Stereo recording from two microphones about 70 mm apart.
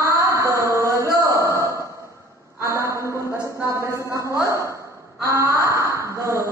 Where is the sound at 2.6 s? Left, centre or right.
Right.